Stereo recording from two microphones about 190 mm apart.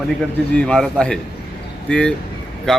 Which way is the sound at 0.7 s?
5° left (ahead or behind).